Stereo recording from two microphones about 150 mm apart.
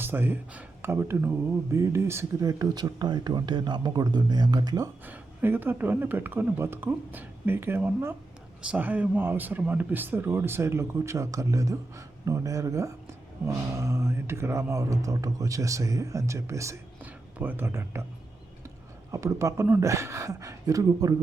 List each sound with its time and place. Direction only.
0.0 s speech: 15° right (ahead or behind)
5.0 s speech: 15° right (ahead or behind)
19.1 s speech: 20° right (ahead or behind)